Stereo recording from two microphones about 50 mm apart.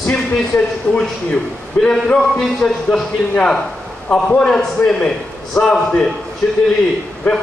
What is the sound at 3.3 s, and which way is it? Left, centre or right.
A man's voice, left.